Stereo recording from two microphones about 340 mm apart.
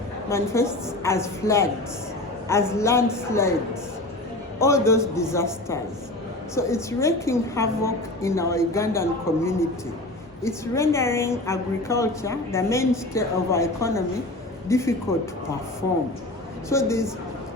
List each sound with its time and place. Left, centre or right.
0.3 s a woman's voice: centre
4.6 s a woman's voice: centre
16.6 s a woman's voice: centre